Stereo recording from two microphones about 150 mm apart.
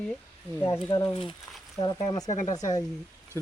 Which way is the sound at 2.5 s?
25° left (ahead or behind).